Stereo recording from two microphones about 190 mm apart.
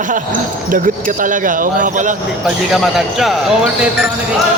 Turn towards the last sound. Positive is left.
turn(degrees=0)  # may be behind; listen again after turning